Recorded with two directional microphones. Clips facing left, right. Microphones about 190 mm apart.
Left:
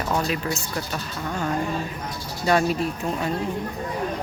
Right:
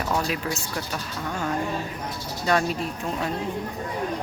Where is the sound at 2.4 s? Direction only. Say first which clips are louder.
Left 3 dB; 5° left (ahead or behind).